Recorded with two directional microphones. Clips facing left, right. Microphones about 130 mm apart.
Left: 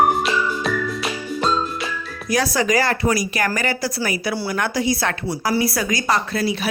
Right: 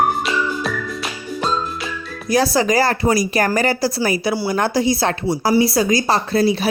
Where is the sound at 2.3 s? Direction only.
30° right (ahead or behind).